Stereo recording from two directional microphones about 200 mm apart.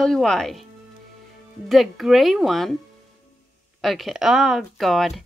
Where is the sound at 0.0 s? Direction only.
5° left (ahead or behind).